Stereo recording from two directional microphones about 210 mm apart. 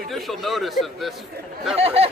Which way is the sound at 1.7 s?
30° right (ahead or behind).